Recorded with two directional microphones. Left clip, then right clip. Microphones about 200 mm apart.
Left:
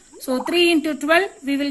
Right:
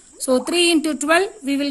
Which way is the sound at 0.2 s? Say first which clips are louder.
Right 1 dB; 60° right (ahead or behind).